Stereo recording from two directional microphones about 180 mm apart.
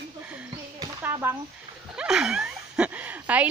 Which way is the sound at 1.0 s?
15° right (ahead or behind).